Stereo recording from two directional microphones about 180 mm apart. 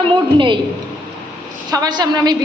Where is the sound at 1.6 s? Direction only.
20° right (ahead or behind).